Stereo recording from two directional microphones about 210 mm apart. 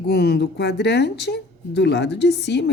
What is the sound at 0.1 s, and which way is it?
Speech, 50° left (ahead or behind).